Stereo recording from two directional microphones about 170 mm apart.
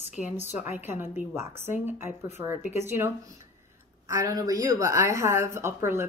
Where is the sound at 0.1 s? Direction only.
10° right (ahead or behind).